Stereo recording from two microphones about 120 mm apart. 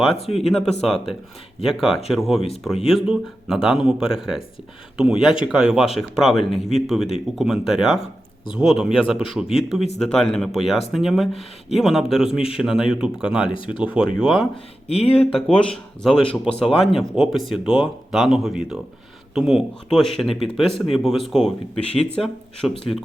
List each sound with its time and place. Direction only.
0.3 s speech: centre (ahead or behind)
14.5 s speech: 55° left (ahead or behind)
15.5 s speech: 5° left (ahead or behind)